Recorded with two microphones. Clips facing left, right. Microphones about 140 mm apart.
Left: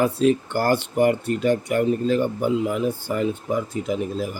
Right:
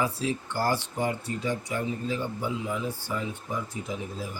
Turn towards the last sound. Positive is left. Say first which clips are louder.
# left 10 dB
turn(degrees=80)